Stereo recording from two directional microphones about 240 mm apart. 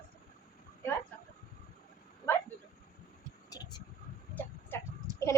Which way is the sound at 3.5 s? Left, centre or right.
Centre.